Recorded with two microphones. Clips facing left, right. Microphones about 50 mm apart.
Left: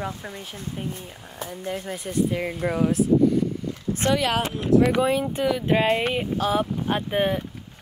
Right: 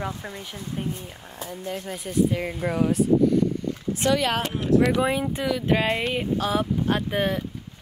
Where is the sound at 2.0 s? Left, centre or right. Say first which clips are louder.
Right 2 dB; centre.